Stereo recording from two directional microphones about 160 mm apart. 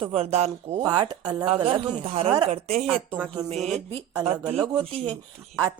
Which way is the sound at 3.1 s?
30° right (ahead or behind).